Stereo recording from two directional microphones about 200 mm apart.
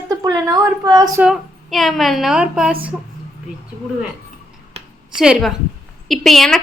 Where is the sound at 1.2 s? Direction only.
Centre (ahead or behind).